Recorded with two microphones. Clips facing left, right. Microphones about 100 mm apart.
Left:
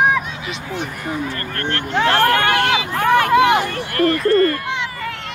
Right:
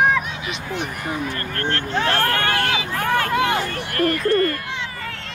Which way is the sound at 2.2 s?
20° left (ahead or behind).